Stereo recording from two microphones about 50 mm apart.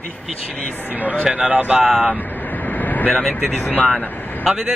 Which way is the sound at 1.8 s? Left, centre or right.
Centre.